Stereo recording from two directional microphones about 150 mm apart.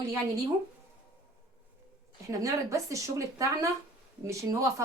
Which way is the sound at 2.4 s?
20° right (ahead or behind).